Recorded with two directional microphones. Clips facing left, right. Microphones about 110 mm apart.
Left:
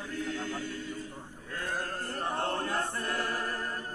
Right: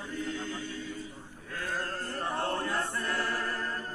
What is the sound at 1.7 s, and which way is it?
Choir, 15° left (ahead or behind).